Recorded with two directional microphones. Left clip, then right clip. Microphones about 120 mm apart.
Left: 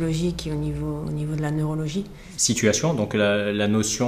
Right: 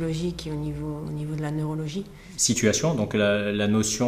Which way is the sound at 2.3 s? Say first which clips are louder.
Left 2 dB; 40° left (ahead or behind).